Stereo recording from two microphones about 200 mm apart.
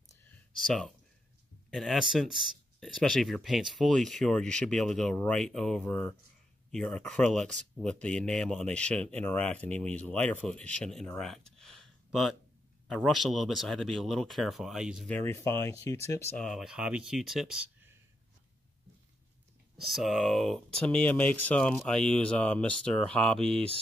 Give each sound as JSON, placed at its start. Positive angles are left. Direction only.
{"t": 0.6, "sound": "speech", "side_deg": 0}
{"t": 15.0, "sound": "speech", "side_deg": 10}
{"t": 16.4, "sound": "speech", "side_deg": 0}
{"t": 19.9, "sound": "speech", "side_deg": 0}